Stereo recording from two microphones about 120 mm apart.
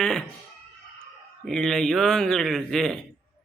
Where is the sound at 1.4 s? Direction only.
5° left (ahead or behind).